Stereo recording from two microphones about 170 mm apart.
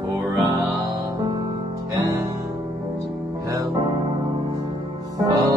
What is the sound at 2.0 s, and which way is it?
Music, 20° right (ahead or behind).